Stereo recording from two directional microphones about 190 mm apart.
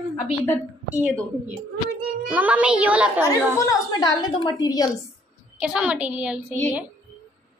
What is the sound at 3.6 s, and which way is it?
A woman's voice, 20° left (ahead or behind).